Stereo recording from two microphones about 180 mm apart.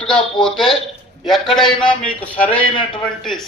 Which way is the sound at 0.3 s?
5° left (ahead or behind).